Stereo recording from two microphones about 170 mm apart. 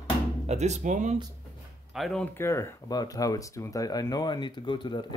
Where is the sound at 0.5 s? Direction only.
40° right (ahead or behind).